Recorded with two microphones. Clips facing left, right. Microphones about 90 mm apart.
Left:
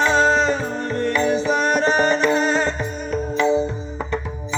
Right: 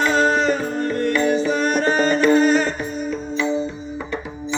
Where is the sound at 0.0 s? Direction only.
20° left (ahead or behind).